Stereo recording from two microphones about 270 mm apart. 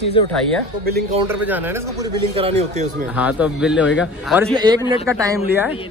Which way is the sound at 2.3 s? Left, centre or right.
Right.